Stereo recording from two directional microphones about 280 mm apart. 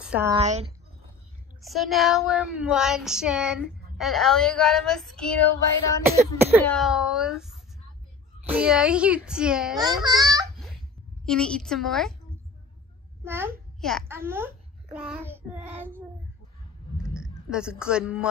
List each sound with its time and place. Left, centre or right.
0.0 s speech: centre
0.4 s speech: right
1.6 s child singing: centre
6.1 s speech: centre
6.6 s child singing: centre
10.0 s speech: centre
10.5 s a sound: centre
11.2 s child singing: centre
13.2 s a child's voice: centre
16.9 s a sound: centre
17.5 s child singing: centre